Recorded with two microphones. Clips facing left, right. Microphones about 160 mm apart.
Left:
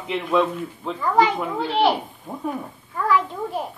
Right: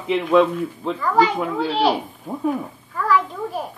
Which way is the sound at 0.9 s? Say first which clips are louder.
Even; 20° left (ahead or behind).